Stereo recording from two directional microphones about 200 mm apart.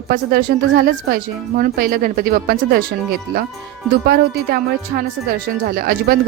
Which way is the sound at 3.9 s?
50° right (ahead or behind).